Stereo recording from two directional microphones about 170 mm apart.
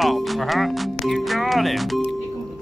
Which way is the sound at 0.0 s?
Centre (ahead or behind).